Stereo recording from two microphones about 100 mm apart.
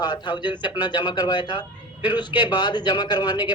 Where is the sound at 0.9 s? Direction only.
45° left (ahead or behind).